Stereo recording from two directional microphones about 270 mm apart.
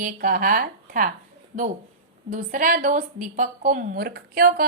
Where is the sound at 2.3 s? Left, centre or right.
Right.